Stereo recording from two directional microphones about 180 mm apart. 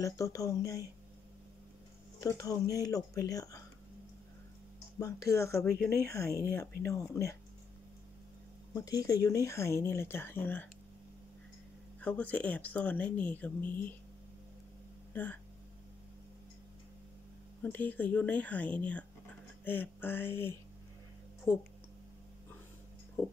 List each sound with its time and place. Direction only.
0.0 s speech: 20° left (ahead or behind)
2.1 s speech: 20° left (ahead or behind)
4.9 s speech: 15° left (ahead or behind)
8.7 s speech: 20° left (ahead or behind)
12.0 s speech: 10° left (ahead or behind)
17.6 s speech: 10° left (ahead or behind)